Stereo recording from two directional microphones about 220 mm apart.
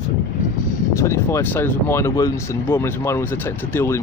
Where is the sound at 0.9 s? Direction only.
10° left (ahead or behind).